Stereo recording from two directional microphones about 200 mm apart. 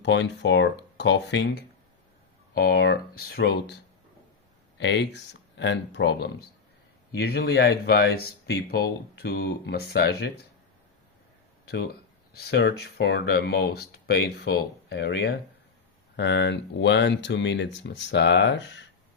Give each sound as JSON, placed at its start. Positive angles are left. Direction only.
{"t": 0.0, "sound": "speech", "side_deg": 60}
{"t": 4.8, "sound": "speech", "side_deg": 60}
{"t": 11.6, "sound": "speech", "side_deg": 55}